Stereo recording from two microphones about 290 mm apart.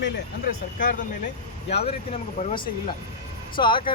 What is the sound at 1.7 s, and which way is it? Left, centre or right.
Speech, left.